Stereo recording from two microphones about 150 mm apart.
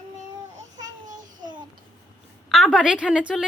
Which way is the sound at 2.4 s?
Centre (ahead or behind).